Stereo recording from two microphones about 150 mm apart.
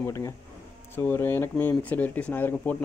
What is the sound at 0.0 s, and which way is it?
A man's voice, 20° left (ahead or behind).